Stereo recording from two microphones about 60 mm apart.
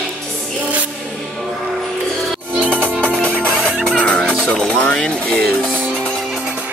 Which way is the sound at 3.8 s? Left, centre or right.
Centre.